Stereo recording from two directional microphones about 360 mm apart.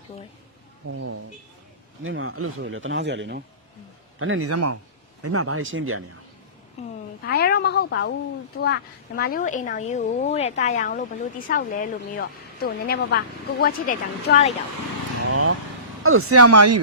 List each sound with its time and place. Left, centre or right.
0.9 s speech: right
6.8 s a sound: centre
7.3 s a woman's voice: left
15.3 s vehicle: right
16.0 s speech: right